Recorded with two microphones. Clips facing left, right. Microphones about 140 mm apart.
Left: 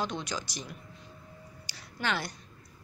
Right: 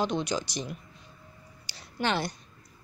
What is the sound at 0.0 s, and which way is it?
Speech, 20° right (ahead or behind).